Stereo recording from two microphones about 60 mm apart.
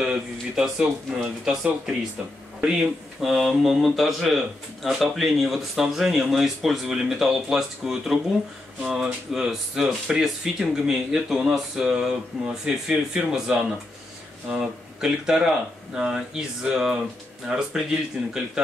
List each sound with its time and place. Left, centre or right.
0.0 s speech: centre
3.2 s speech: centre
18.2 s speech: centre